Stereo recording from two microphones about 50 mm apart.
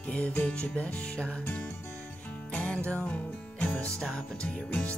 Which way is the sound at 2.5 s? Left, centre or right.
Left.